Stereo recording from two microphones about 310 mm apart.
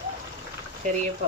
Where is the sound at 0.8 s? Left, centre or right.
Right.